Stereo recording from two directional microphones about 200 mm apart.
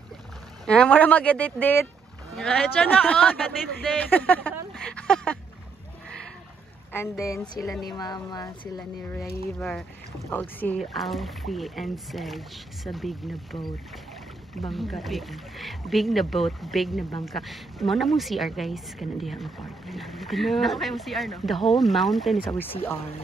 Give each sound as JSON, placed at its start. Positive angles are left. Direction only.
{"t": 0.7, "sound": "a woman's voice", "side_deg": 5}
{"t": 6.9, "sound": "speech", "side_deg": 15}
{"t": 9.6, "sound": "a woman's voice", "side_deg": 0}
{"t": 14.7, "sound": "a woman's voice", "side_deg": 0}